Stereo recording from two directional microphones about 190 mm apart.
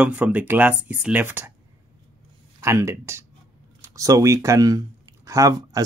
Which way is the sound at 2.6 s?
15° right (ahead or behind).